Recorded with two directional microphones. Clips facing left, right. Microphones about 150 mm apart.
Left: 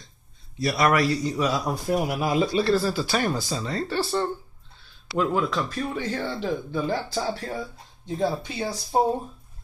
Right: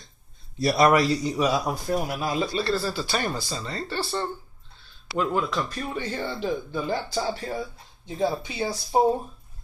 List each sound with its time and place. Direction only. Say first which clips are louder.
0.6 s a man's voice: right 3 dB; 35° right (ahead or behind)
0.8 s a man's voice: even; 20° right (ahead or behind)
1.6 s speech: even; 5° right (ahead or behind)
1.9 s speech: left 5 dB; 15° left (ahead or behind)
2.4 s speech: left 5 dB; 5° left (ahead or behind)